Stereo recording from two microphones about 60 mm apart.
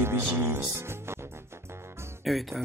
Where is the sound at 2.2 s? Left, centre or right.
Centre.